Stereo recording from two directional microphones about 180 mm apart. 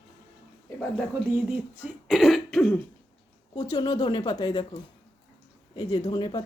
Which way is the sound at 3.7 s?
20° left (ahead or behind).